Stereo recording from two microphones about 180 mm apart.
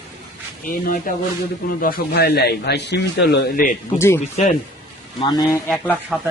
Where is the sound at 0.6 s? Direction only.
50° left (ahead or behind).